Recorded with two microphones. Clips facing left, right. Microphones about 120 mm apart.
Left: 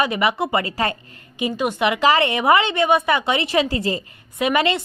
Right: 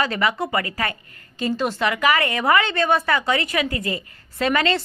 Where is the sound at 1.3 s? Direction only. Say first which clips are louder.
Left 1 dB; 15° left (ahead or behind).